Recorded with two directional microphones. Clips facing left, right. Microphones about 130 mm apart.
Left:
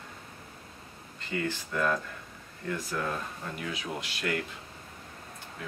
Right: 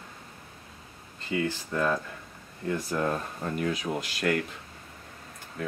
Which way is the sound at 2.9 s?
30° right (ahead or behind).